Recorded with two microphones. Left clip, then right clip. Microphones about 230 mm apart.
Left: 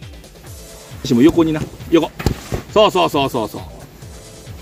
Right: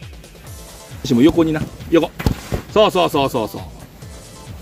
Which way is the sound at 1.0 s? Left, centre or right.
Centre.